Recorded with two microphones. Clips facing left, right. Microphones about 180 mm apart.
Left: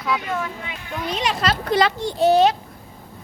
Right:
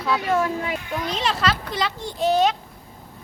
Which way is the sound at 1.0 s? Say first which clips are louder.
Left 3 dB; 10° left (ahead or behind).